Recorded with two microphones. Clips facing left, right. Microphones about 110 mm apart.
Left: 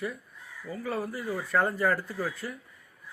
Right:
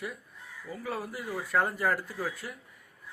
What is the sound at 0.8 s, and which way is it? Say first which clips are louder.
Speech: left 3 dB; 45° left (ahead or behind).